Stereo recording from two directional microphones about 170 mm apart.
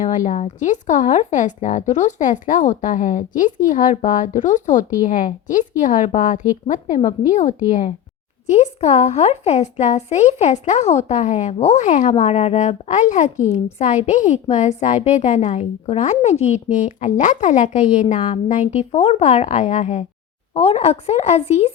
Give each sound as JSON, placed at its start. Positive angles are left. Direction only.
{"t": 0.0, "sound": "speech", "side_deg": 45}